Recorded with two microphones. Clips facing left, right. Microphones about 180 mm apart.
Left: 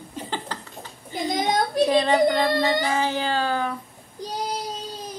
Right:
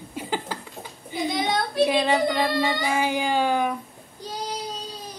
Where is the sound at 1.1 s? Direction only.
45° left (ahead or behind).